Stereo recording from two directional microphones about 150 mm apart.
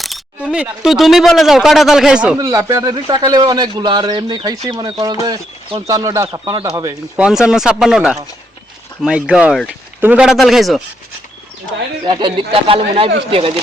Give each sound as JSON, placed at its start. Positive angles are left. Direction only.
{"t": 0.0, "sound": "speech", "side_deg": -5}
{"t": 2.4, "sound": "speech", "side_deg": -20}
{"t": 7.2, "sound": "speech", "side_deg": -5}
{"t": 12.0, "sound": "speech", "side_deg": -30}